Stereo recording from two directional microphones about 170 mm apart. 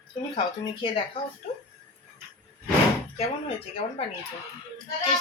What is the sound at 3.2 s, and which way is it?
Speech, 35° left (ahead or behind).